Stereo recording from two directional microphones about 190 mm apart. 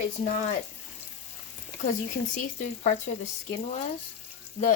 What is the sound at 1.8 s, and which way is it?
Speech, 40° left (ahead or behind).